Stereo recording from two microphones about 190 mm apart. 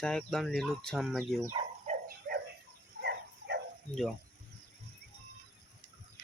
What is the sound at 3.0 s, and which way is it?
Dog, 60° right (ahead or behind).